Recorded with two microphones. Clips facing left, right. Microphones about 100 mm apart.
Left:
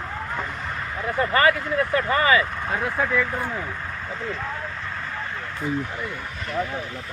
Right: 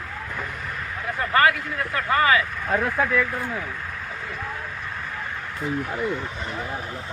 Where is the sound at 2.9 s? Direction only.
5° left (ahead or behind).